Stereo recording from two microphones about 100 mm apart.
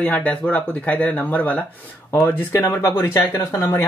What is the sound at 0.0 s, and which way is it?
Speech, 15° left (ahead or behind).